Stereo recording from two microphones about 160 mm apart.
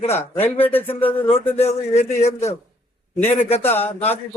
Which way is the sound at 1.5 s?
45° left (ahead or behind).